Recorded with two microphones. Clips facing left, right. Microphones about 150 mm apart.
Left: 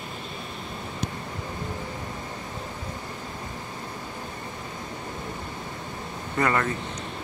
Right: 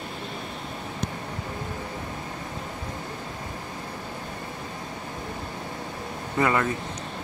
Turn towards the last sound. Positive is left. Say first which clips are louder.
# right 1 dB
turn(degrees=-15)  # may be behind; listen again after turning